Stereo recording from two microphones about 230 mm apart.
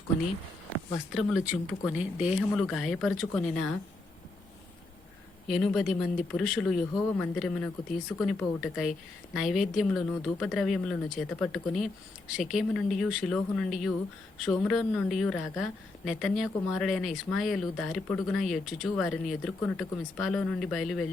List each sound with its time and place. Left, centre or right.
1.1 s a woman's voice: centre
5.5 s a woman's voice: centre